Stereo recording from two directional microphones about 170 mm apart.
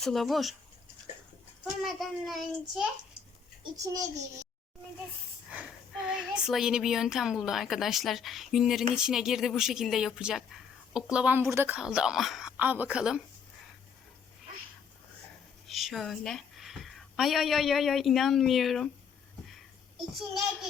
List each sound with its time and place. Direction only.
0.0 s speech: centre (ahead or behind)
1.8 s speech: centre (ahead or behind)
3.6 s a child's voice: 20° right (ahead or behind)
5.5 s speech: 5° right (ahead or behind)
15.6 s a woman's voice: centre (ahead or behind)